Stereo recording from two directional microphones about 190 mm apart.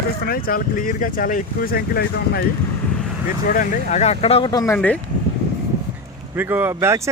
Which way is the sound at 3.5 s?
40° left (ahead or behind).